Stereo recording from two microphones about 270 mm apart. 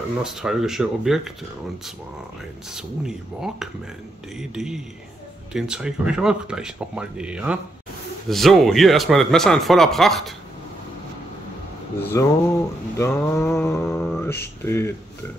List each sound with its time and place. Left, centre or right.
0.2 s speech: centre
2.7 s speech: centre
12.0 s speech: centre